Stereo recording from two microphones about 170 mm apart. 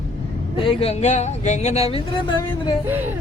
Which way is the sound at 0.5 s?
30° left (ahead or behind).